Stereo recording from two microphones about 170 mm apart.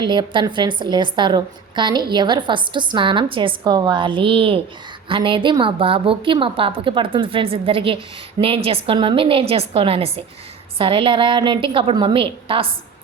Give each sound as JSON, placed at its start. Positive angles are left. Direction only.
{"t": 0.0, "sound": "a woman's voice", "side_deg": -25}